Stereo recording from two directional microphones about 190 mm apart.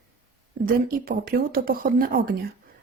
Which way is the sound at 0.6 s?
50° right (ahead or behind).